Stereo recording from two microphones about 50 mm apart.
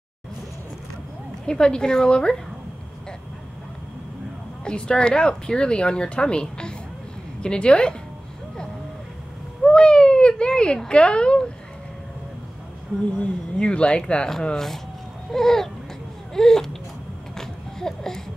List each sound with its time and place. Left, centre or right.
1.4 s a woman's voice: centre
4.6 s speech: centre
9.7 s speech: centre
13.2 s speech: left
15.3 s a woman's voice: centre
17.4 s a sound: centre